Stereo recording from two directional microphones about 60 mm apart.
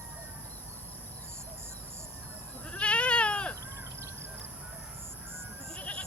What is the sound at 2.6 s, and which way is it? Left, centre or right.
Cat, centre.